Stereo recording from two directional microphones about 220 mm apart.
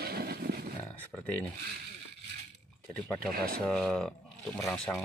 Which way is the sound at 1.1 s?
5° left (ahead or behind).